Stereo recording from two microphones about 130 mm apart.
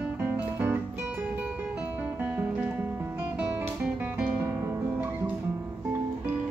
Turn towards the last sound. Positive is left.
turn(degrees=-15)  # may be behind; listen again after turning